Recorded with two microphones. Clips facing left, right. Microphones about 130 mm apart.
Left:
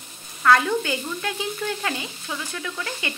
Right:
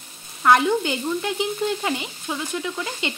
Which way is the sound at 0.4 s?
20° right (ahead or behind).